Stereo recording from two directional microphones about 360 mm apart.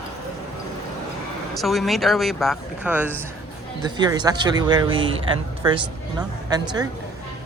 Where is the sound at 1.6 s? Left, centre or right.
Centre.